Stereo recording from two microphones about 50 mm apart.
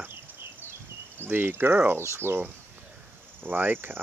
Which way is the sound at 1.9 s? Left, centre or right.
Right.